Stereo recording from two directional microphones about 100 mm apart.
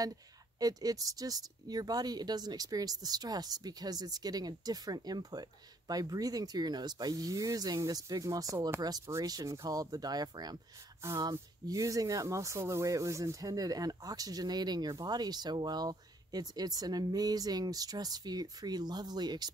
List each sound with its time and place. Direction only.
0.6 s speech: 40° right (ahead or behind)
8.5 s speech: 25° right (ahead or behind)
8.8 s speech: 35° right (ahead or behind)
11.0 s speech: 25° right (ahead or behind)
11.6 s speech: 35° right (ahead or behind)